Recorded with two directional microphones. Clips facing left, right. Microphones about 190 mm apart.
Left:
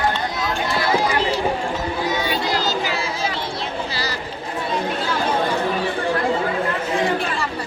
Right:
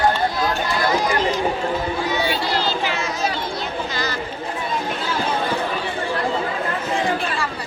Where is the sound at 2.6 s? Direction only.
40° left (ahead or behind).